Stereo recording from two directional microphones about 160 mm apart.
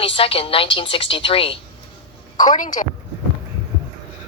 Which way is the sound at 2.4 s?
55° left (ahead or behind).